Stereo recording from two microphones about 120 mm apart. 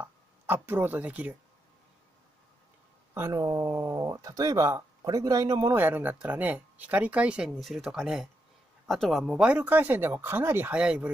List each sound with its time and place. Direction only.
0.0 s speech: 20° right (ahead or behind)
3.2 s speech: 25° right (ahead or behind)
5.8 s speech: 15° right (ahead or behind)